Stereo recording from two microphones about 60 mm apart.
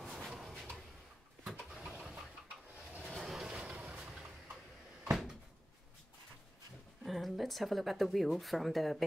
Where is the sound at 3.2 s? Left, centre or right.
Centre.